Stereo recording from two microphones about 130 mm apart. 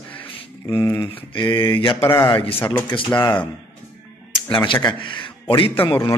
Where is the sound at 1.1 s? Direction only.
35° left (ahead or behind).